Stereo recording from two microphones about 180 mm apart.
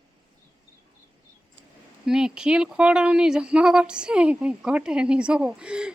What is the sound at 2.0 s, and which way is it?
Speech, 5° right (ahead or behind).